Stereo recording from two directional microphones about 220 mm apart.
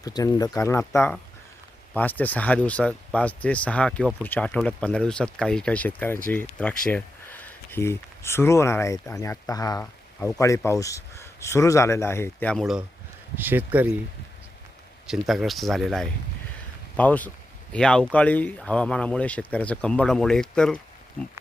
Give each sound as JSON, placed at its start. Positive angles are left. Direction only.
{"t": 0.0, "sound": "speech", "side_deg": 15}
{"t": 1.9, "sound": "speech", "side_deg": 5}
{"t": 15.0, "sound": "speech", "side_deg": 0}